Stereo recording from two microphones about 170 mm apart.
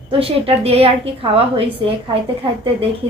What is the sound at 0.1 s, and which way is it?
A woman's voice, 35° right (ahead or behind).